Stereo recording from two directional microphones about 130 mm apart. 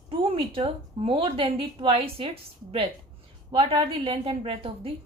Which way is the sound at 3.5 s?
50° right (ahead or behind).